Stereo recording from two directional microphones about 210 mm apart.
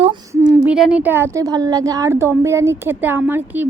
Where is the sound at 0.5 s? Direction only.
5° right (ahead or behind).